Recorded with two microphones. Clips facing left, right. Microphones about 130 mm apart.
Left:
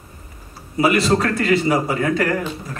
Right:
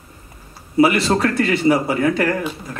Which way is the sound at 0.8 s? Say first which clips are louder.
Even; 30° right (ahead or behind).